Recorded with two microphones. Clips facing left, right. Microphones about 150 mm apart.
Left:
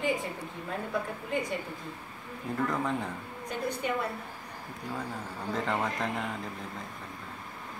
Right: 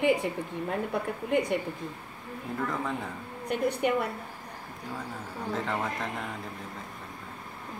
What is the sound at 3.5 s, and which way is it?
Speech, 65° right (ahead or behind).